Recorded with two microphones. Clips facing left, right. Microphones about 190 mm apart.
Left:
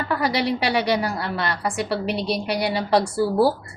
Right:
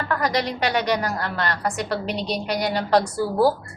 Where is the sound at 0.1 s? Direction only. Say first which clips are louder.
Left 2 dB; 5° left (ahead or behind).